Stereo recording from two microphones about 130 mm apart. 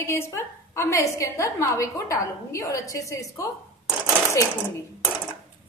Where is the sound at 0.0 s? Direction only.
20° left (ahead or behind).